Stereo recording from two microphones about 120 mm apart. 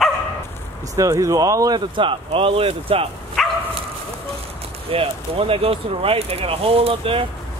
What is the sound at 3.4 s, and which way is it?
Dog, centre (ahead or behind).